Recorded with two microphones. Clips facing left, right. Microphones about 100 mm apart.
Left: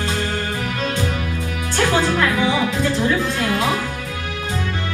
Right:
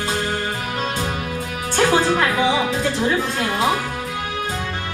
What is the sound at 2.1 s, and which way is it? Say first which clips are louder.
Music: even; 30° right (ahead or behind).